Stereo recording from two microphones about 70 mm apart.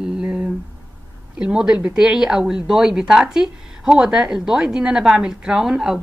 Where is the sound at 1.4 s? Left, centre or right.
Centre.